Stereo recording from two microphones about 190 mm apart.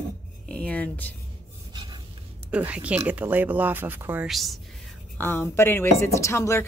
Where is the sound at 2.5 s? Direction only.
5° right (ahead or behind).